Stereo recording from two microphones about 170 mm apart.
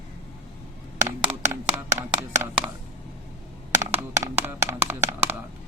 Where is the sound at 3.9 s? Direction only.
15° right (ahead or behind).